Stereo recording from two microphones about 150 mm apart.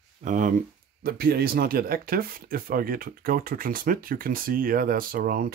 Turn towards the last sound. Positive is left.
turn(degrees=-75)  # may be behind; listen again after turning